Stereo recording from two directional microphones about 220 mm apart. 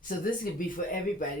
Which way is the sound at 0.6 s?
40° left (ahead or behind).